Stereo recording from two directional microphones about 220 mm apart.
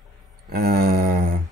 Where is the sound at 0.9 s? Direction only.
40° right (ahead or behind).